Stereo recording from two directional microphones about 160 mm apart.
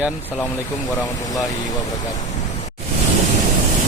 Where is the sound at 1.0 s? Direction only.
20° left (ahead or behind).